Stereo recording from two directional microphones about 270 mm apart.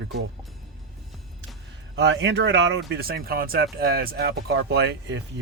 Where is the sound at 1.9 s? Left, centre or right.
Right.